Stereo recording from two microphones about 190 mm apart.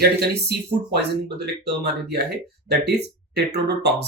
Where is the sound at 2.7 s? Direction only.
60° right (ahead or behind).